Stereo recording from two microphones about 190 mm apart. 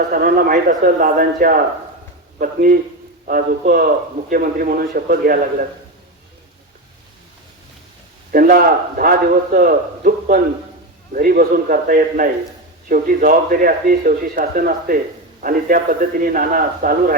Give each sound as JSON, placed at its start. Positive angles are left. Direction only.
{"t": 0.1, "sound": "a man's voice", "side_deg": -50}
{"t": 8.3, "sound": "a man's voice", "side_deg": -50}